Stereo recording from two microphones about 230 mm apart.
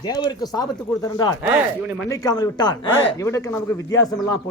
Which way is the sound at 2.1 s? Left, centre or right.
Centre.